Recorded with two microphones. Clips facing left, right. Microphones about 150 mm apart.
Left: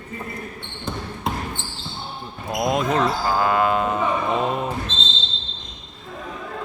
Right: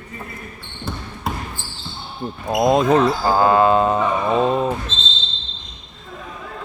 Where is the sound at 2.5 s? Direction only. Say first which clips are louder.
Right 6 dB; 35° right (ahead or behind).